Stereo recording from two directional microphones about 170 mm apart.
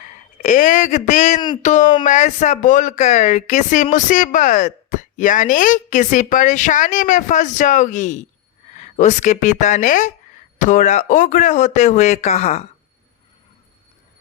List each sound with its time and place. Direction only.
0.0 s speech: 50° left (ahead or behind)